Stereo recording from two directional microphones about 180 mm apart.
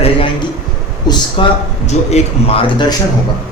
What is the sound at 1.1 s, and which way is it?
Speech, 25° left (ahead or behind).